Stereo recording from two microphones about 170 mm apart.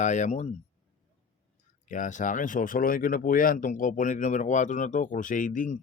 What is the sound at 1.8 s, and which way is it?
Speech, 50° left (ahead or behind).